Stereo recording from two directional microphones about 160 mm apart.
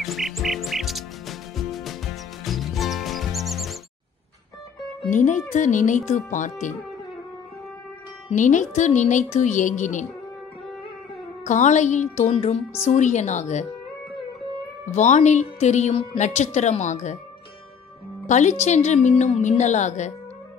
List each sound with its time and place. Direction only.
0.0 s music: centre (ahead or behind)
5.1 s speech: 50° left (ahead or behind)
8.3 s speech: 50° left (ahead or behind)
11.4 s speech: 50° left (ahead or behind)
15.0 s speech: 50° left (ahead or behind)
18.2 s speech: 50° left (ahead or behind)